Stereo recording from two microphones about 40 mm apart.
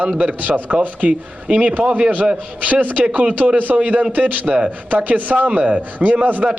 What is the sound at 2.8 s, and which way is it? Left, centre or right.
A man's voice, right.